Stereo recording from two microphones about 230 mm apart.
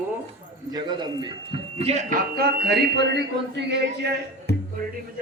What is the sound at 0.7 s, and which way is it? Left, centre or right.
Speech, centre.